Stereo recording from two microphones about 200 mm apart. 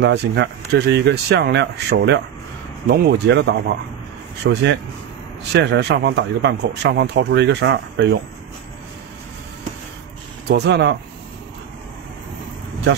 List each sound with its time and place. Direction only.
0.0 s speech: 65° right (ahead or behind)
10.5 s speech: 60° right (ahead or behind)